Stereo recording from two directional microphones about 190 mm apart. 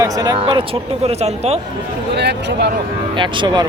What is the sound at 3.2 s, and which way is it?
Speech, 25° right (ahead or behind).